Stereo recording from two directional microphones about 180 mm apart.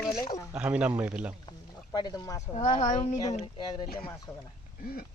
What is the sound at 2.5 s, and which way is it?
Speech, 40° left (ahead or behind).